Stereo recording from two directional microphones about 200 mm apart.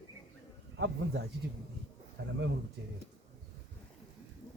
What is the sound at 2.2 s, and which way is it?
Speech, 55° right (ahead or behind).